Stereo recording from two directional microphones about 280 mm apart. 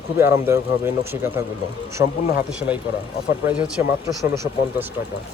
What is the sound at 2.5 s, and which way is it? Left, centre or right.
A man's voice, centre.